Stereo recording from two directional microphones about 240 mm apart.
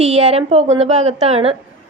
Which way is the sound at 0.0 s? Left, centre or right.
Right.